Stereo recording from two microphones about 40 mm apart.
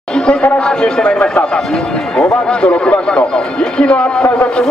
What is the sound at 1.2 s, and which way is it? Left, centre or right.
A man's voice, left.